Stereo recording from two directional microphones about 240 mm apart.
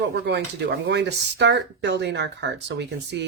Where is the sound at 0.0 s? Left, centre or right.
Right.